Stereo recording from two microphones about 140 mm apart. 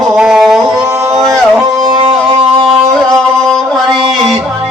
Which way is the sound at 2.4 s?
45° right (ahead or behind).